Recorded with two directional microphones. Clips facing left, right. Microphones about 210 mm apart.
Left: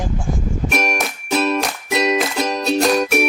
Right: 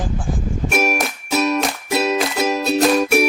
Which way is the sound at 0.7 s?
5° right (ahead or behind).